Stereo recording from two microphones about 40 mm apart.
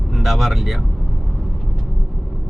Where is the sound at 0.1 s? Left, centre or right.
Centre.